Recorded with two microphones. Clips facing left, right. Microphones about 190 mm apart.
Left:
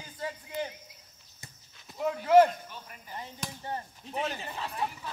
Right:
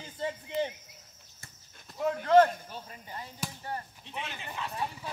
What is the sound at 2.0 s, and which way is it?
Speech, 5° left (ahead or behind).